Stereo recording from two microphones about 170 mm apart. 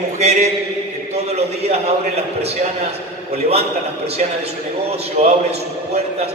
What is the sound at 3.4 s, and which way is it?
A man's voice, 35° right (ahead or behind).